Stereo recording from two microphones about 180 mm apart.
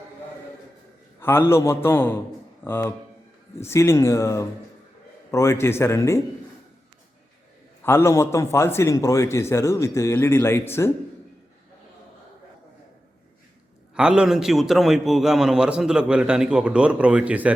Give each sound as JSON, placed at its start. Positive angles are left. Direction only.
{"t": 1.2, "sound": "a man's voice", "side_deg": 15}
{"t": 7.9, "sound": "a man's voice", "side_deg": 15}
{"t": 13.9, "sound": "a man's voice", "side_deg": -5}